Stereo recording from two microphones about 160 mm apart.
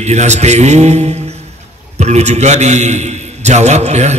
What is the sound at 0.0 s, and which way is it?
A man's voice, 45° right (ahead or behind).